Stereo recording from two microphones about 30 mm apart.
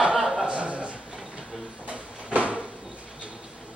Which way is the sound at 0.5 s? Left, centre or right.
Right.